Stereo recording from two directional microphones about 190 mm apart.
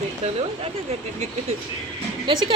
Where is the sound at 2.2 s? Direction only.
25° right (ahead or behind).